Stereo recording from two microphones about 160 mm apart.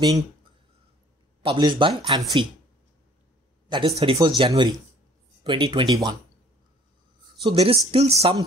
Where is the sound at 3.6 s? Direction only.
30° right (ahead or behind).